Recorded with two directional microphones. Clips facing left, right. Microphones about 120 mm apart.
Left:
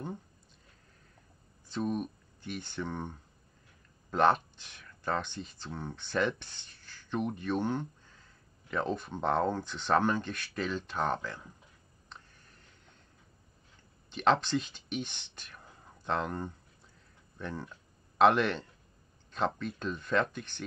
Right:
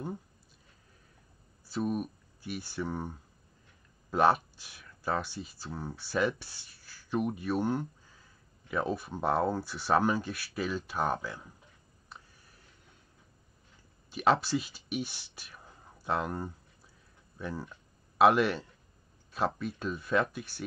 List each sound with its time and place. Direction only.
1.7 s speech: 5° right (ahead or behind)
12.1 s a sound: 5° right (ahead or behind)
14.1 s speech: 5° right (ahead or behind)